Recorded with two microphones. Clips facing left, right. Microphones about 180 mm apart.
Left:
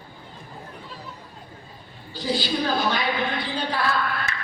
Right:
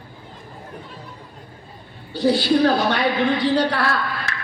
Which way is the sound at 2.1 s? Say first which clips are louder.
Right 9 dB; 65° right (ahead or behind).